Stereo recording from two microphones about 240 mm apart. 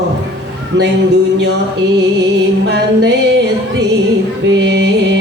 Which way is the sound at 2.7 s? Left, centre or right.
Right.